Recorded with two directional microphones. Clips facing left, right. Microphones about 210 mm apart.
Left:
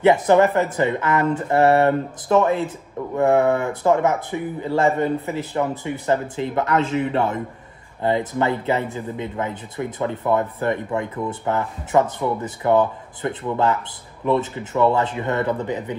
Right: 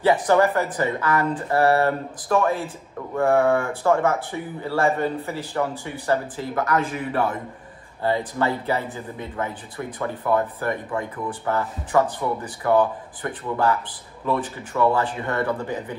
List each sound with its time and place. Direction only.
0.0 s speech: 20° left (ahead or behind)
9.8 s speech: 20° left (ahead or behind)